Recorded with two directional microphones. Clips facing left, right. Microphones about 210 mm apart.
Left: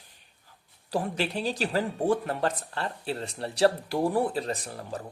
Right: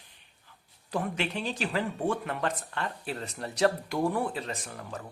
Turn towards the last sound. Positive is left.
turn(degrees=35)  # may be behind; listen again after turning